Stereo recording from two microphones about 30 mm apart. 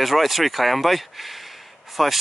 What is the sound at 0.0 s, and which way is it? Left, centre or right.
Speech, centre.